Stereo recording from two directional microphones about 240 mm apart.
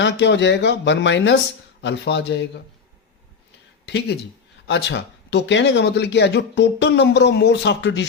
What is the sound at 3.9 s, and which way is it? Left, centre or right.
Speech, left.